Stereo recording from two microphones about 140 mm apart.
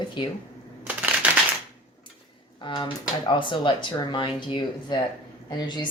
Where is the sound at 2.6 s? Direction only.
35° left (ahead or behind).